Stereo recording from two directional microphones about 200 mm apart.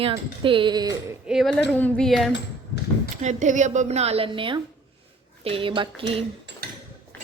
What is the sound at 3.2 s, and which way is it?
A woman's voice, 35° right (ahead or behind).